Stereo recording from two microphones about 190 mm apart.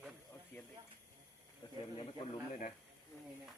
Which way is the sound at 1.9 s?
30° left (ahead or behind).